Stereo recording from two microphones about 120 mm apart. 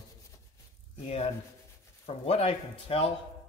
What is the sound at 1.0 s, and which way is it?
Speech, 60° left (ahead or behind).